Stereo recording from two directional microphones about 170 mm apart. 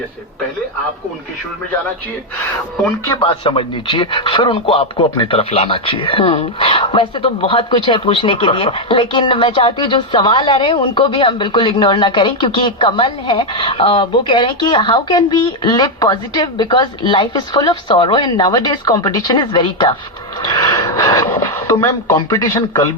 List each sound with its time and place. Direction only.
3.2 s speech: 30° left (ahead or behind)